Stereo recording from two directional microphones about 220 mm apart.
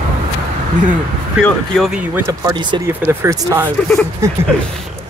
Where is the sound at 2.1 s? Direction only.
15° right (ahead or behind).